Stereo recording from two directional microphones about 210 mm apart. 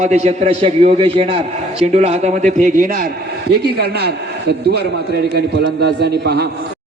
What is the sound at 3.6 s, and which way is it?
A man's voice, 50° right (ahead or behind).